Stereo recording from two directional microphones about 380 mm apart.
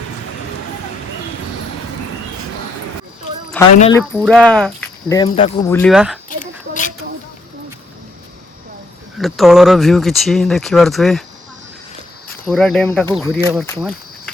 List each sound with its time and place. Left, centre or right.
3.8 s speech: centre
6.4 s a sound: centre
9.1 s speech: centre
12.5 s speech: centre